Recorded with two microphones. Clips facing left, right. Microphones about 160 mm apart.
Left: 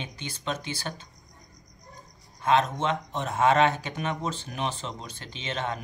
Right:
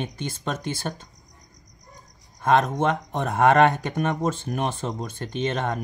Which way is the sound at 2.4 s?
55° right (ahead or behind).